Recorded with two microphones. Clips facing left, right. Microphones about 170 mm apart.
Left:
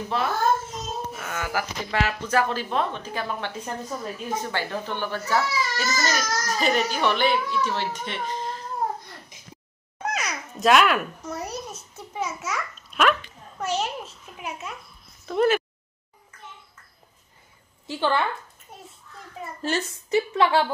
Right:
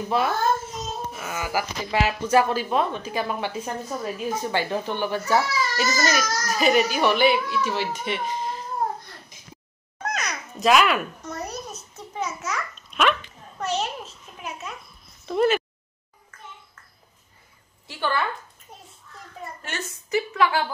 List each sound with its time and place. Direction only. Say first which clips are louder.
0.1 s speech: right 1 dB; 10° right (ahead or behind)
10.0 s babbling: even; 5° left (ahead or behind)
15.2 s speech: even; centre (ahead or behind)
17.8 s a woman's voice: left 3 dB; 20° left (ahead or behind)
19.6 s a woman's voice: left 11 dB; 30° left (ahead or behind)